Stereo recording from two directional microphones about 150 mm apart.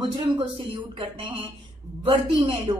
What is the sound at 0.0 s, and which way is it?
A woman's voice, 30° right (ahead or behind).